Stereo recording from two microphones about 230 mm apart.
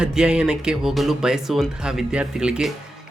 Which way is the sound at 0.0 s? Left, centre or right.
Centre.